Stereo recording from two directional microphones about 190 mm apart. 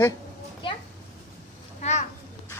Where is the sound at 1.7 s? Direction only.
35° left (ahead or behind).